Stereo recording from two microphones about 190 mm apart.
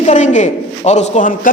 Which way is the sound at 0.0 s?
40° left (ahead or behind).